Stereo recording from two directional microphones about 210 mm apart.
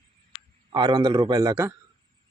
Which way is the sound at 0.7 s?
20° right (ahead or behind).